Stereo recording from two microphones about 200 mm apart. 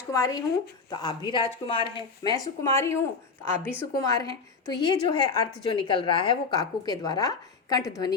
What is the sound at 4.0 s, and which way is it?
A woman's voice, 15° left (ahead or behind).